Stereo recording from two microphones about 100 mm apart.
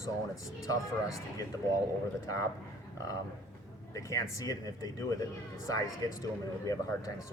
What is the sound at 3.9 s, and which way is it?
A man's voice, 35° left (ahead or behind).